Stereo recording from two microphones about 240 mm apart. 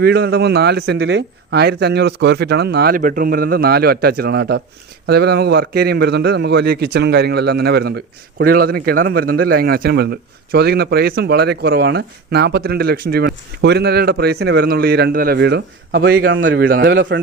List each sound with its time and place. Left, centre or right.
0.0 s a man's voice: right
16.6 s a man's voice: right